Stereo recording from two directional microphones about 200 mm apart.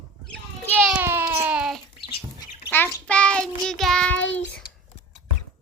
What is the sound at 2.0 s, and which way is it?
Bird, 25° left (ahead or behind).